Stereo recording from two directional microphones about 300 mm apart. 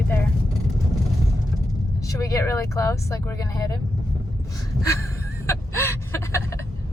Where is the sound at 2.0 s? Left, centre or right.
Centre.